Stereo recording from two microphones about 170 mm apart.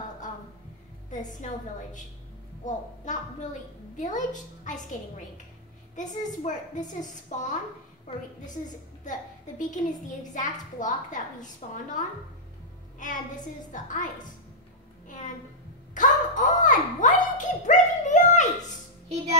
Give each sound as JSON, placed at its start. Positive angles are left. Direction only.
{"t": 1.1, "sound": "a woman's voice", "side_deg": 45}
{"t": 2.6, "sound": "a woman's voice", "side_deg": 45}
{"t": 9.6, "sound": "a woman's voice", "side_deg": 45}
{"t": 13.7, "sound": "a woman's voice", "side_deg": 50}
{"t": 15.9, "sound": "a sound", "side_deg": 50}